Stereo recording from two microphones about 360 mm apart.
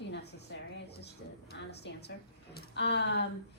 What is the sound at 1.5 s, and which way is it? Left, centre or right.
Speech, left.